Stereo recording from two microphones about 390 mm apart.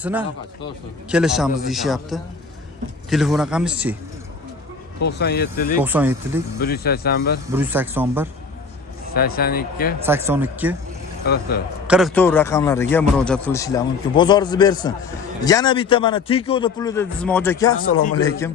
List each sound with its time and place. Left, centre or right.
0.0 s a man's voice: centre
5.0 s speech: left
5.8 s a man's voice: centre
6.6 s speech: left
7.5 s a man's voice: centre
9.1 s speech: left
10.0 s a man's voice: centre
11.3 s speech: left
11.9 s a man's voice: centre
17.9 s a man's voice: left
18.3 s a man's voice: centre